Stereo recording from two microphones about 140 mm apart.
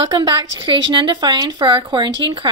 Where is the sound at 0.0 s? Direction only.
35° right (ahead or behind).